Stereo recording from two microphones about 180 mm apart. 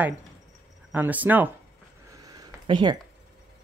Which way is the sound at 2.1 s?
20° right (ahead or behind).